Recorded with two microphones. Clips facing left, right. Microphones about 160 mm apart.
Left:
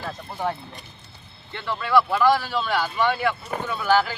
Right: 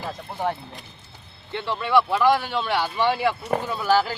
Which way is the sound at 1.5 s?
25° right (ahead or behind).